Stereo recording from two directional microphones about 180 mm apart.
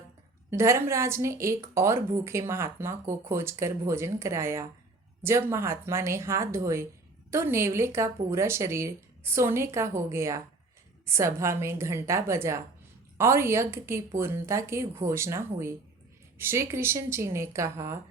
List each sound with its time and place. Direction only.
0.5 s a woman's voice: 15° right (ahead or behind)